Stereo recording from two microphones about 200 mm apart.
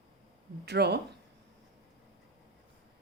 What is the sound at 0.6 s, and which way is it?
Speech, 55° right (ahead or behind).